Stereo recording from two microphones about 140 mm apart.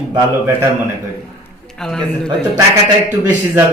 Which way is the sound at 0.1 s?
20° right (ahead or behind).